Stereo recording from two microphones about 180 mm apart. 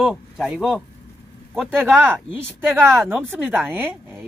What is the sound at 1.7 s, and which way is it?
Speech, 15° right (ahead or behind).